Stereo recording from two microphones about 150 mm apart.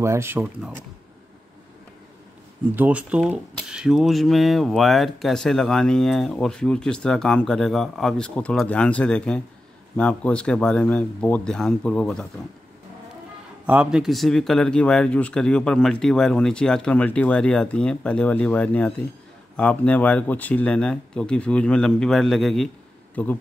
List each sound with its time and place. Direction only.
0.0 s speech: 15° right (ahead or behind)
2.7 s speech: 10° right (ahead or behind)
13.7 s speech: 5° right (ahead or behind)